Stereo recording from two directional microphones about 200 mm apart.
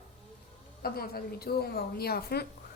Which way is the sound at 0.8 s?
50° left (ahead or behind).